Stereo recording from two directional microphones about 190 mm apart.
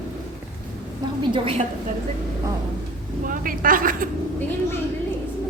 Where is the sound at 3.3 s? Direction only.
45° right (ahead or behind).